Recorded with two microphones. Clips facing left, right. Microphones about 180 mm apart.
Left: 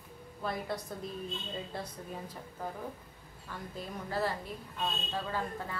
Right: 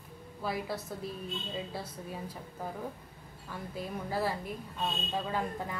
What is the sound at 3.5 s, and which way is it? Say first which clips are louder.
A woman's voice: right 3 dB; 10° right (ahead or behind).